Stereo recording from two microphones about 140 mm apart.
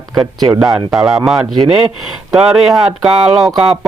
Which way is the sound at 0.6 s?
5° right (ahead or behind).